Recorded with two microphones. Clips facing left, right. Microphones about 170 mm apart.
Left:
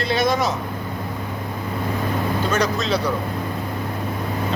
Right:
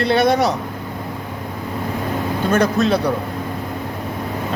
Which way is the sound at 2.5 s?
55° right (ahead or behind).